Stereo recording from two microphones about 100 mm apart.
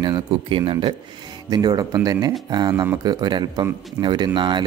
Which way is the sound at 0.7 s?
70° right (ahead or behind).